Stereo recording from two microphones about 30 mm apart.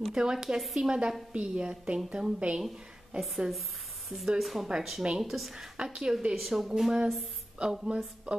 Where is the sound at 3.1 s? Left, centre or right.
Right.